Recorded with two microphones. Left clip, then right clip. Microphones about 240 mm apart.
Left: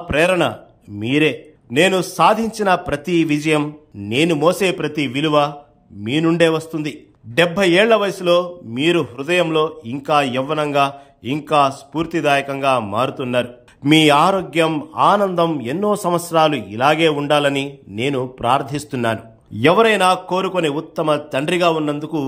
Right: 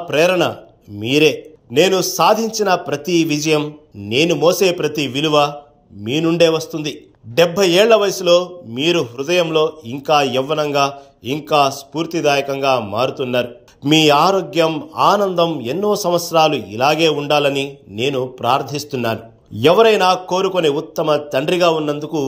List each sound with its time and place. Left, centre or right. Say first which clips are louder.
0.1 s a man's voice: right 1 dB; centre